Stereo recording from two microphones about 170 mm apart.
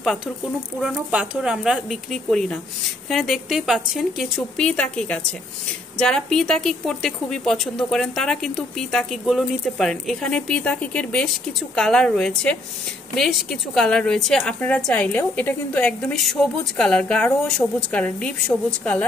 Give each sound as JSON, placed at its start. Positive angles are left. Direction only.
{"t": 0.7, "sound": "a woman's voice", "side_deg": -5}